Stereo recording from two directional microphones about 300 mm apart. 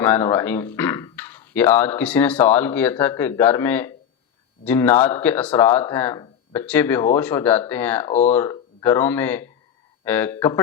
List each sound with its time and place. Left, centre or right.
0.0 s speech: centre
8.1 s speech: left
8.4 s speech: centre